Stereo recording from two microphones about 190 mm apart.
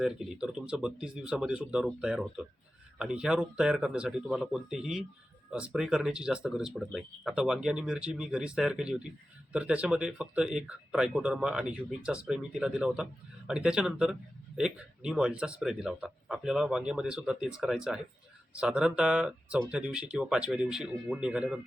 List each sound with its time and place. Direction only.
0.0 s a man's voice: 5° right (ahead or behind)